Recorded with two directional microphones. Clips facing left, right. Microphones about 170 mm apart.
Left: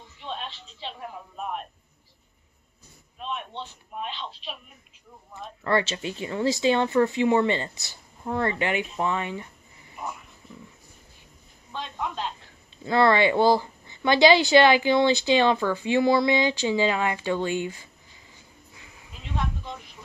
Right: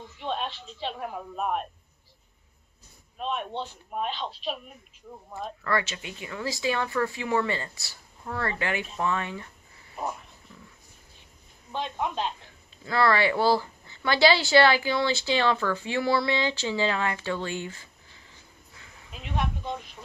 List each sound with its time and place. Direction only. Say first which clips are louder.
0.2 s a woman's voice: right 4 dB; 50° right (ahead or behind)
3.2 s speech: right 3 dB; 40° right (ahead or behind)
5.6 s speech: left 5 dB; 25° left (ahead or behind)
11.7 s speech: right 2 dB; 20° right (ahead or behind)
12.8 s speech: left 4 dB; 20° left (ahead or behind)
19.1 s a sound: right 1 dB; 20° right (ahead or behind)